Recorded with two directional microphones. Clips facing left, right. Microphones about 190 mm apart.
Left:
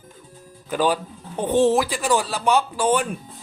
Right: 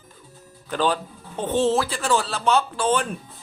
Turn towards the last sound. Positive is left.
turn(degrees=15)  # may be behind; listen again after turning